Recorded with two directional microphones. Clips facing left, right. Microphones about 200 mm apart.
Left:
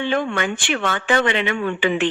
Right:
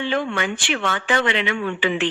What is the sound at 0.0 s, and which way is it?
Speech, 50° left (ahead or behind).